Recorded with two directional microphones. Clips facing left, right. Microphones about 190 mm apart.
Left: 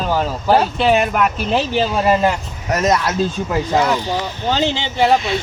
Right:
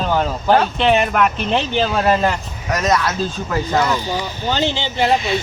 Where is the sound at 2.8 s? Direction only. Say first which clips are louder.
Left 1 dB; 20° left (ahead or behind).